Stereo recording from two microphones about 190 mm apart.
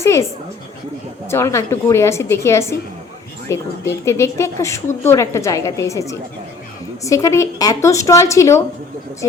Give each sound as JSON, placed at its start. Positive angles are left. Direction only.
{"t": 0.0, "sound": "a woman's voice", "side_deg": 15}
{"t": 1.3, "sound": "a woman's voice", "side_deg": 15}